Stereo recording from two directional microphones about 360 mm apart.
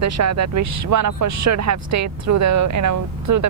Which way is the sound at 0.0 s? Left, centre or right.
Right.